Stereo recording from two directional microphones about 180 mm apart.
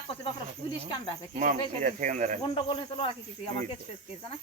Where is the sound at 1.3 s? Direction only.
45° right (ahead or behind).